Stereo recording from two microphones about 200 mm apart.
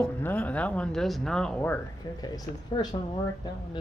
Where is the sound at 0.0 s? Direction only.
10° left (ahead or behind).